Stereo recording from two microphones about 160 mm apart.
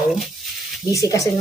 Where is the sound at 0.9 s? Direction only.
20° left (ahead or behind).